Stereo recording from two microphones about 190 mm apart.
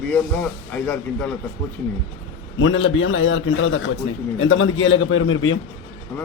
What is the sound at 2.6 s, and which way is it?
A man's voice, 90° left.